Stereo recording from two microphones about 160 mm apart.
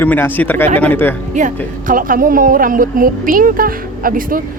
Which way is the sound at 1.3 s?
55° right (ahead or behind).